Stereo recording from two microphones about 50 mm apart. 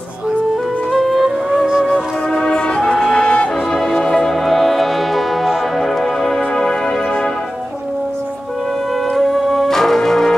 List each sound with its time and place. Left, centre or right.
0.9 s music: centre
2.3 s brass instrument: centre
3.7 s music: centre
9.1 s music: centre